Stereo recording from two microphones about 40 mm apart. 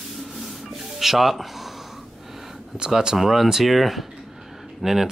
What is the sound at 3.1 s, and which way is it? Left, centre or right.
Rub, centre.